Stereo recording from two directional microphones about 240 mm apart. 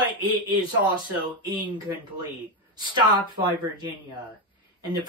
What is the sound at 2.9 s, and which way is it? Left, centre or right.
Speech, centre.